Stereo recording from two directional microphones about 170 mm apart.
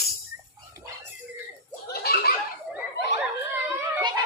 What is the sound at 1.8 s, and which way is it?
Giggle, 65° left (ahead or behind).